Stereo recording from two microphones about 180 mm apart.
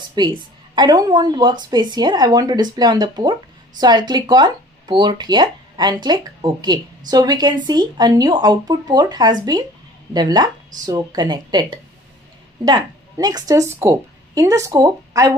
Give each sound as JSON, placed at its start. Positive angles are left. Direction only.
{"t": 0.1, "sound": "a woman's voice", "side_deg": -25}